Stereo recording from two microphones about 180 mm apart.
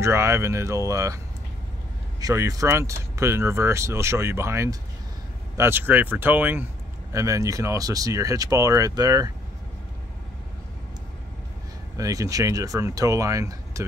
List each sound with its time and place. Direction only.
0.0 s speech: 15° right (ahead or behind)
12.0 s speech: 20° right (ahead or behind)